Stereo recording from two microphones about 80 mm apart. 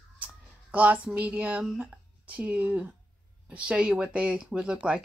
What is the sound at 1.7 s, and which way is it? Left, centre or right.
Speech, centre.